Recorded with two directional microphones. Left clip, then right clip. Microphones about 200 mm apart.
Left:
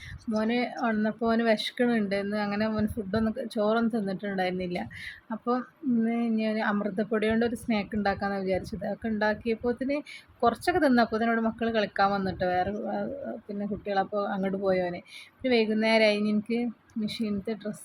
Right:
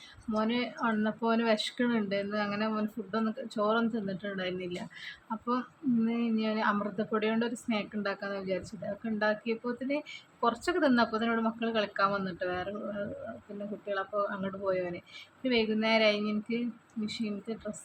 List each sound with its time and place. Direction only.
0.3 s speech: 10° left (ahead or behind)
13.8 s speech: 15° left (ahead or behind)